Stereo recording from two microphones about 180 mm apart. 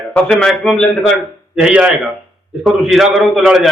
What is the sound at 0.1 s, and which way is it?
A man's voice, 5° left (ahead or behind).